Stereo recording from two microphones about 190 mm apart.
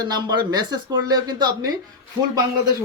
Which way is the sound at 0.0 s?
20° right (ahead or behind).